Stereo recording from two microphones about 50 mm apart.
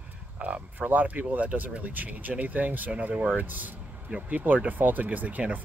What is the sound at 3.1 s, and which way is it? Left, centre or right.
Speech, centre.